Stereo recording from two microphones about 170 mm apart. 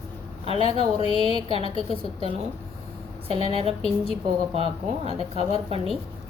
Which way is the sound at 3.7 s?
35° left (ahead or behind).